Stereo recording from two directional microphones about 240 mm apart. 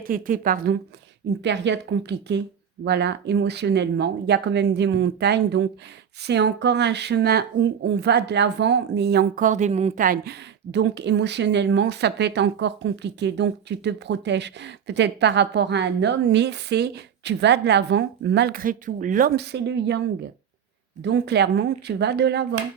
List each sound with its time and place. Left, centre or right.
0.0 s a woman's voice: right
21.0 s speech: right